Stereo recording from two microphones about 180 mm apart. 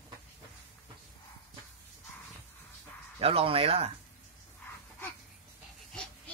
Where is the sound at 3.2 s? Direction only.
30° right (ahead or behind).